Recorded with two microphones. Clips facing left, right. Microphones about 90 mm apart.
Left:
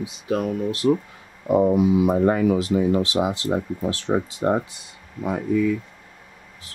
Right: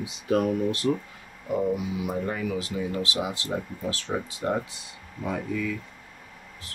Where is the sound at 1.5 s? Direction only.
55° left (ahead or behind).